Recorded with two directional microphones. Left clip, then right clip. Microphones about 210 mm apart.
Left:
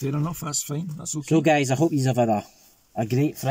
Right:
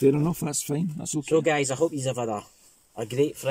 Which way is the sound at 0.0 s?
20° right (ahead or behind).